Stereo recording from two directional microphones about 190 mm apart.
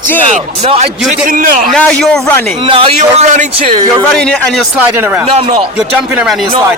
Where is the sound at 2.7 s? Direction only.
30° right (ahead or behind).